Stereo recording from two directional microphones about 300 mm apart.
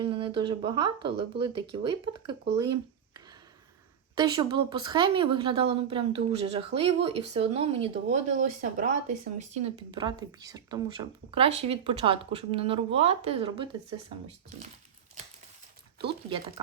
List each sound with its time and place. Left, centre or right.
0.0 s a woman's voice: centre
4.2 s a woman's voice: centre